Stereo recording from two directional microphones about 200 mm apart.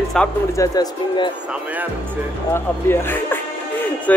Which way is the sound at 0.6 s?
20° left (ahead or behind).